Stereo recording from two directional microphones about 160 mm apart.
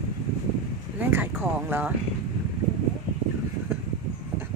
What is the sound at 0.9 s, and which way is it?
Speech, 10° right (ahead or behind).